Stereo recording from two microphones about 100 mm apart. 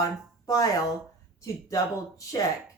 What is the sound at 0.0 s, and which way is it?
Speech, 35° left (ahead or behind).